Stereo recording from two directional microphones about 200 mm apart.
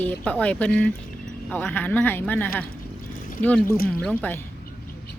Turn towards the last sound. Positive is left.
turn(degrees=10)  # may be behind; listen again after turning